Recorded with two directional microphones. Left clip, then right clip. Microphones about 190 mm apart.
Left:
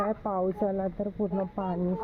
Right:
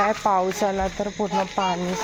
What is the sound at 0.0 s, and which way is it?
Speech, 10° right (ahead or behind).